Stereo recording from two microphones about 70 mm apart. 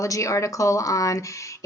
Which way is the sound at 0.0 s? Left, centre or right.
Left.